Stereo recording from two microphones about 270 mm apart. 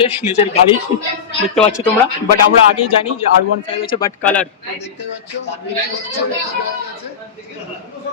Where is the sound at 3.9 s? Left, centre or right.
Centre.